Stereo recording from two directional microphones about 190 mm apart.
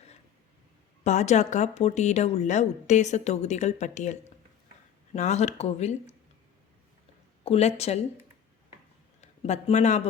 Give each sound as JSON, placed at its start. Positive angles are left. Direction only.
{"t": 1.0, "sound": "a woman's voice", "side_deg": 40}
{"t": 7.4, "sound": "speech", "side_deg": 30}
{"t": 9.2, "sound": "speech", "side_deg": 35}